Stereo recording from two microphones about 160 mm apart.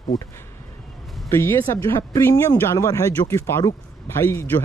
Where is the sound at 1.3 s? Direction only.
15° left (ahead or behind).